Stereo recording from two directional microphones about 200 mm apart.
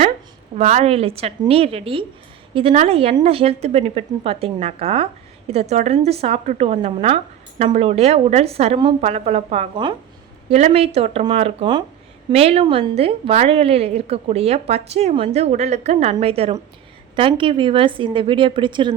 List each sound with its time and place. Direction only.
0.5 s a woman's voice: 35° right (ahead or behind)